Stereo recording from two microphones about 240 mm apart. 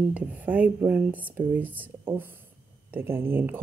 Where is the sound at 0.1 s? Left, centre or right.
Centre.